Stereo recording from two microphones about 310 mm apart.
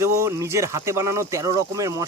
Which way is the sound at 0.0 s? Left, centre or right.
Centre.